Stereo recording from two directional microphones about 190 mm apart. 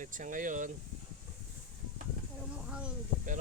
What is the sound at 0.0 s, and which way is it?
Speech, 45° right (ahead or behind).